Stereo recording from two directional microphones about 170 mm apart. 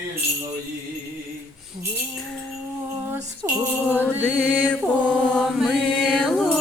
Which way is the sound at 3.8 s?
10° left (ahead or behind).